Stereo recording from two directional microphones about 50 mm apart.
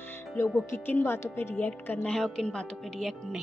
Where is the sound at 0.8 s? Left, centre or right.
Left.